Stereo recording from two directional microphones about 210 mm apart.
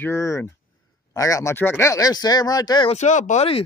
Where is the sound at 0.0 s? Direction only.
15° left (ahead or behind).